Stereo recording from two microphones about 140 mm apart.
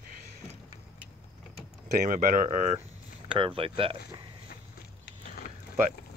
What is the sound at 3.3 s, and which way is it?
Speech, 40° right (ahead or behind).